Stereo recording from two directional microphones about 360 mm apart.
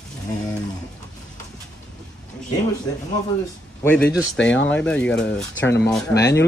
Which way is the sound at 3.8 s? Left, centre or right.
Centre.